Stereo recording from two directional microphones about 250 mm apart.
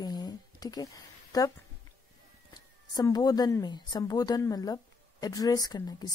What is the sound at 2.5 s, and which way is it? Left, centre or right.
Speech, centre.